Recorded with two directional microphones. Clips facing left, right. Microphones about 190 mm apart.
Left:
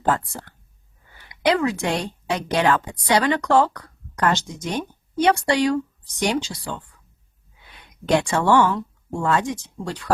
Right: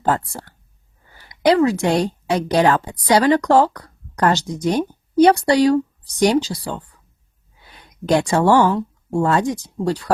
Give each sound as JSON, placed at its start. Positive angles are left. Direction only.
{"t": 0.0, "sound": "a woman's voice", "side_deg": -40}